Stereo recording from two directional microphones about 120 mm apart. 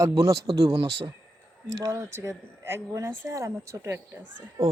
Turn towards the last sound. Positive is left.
turn(degrees=-25)  # may be behind; listen again after turning